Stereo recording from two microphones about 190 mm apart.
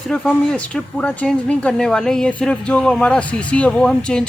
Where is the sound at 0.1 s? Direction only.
5° left (ahead or behind).